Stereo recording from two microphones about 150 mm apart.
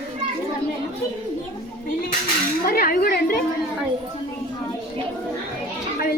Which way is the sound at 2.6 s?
80° left.